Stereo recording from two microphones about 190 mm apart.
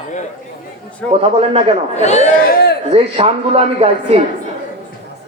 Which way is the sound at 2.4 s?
55° left (ahead or behind).